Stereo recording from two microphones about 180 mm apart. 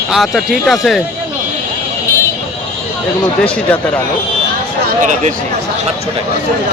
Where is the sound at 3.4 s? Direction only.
5° left (ahead or behind).